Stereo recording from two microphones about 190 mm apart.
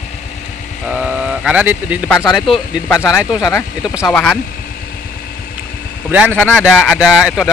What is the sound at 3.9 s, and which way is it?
Speech, centre (ahead or behind).